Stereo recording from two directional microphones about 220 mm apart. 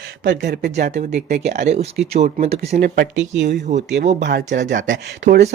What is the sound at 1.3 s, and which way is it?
Speech, 30° right (ahead or behind).